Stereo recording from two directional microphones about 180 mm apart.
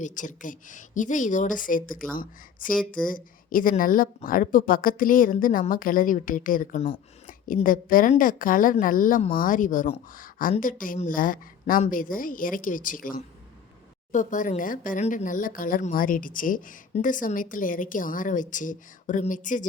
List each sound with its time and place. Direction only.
0.0 s a woman's voice: 45° left (ahead or behind)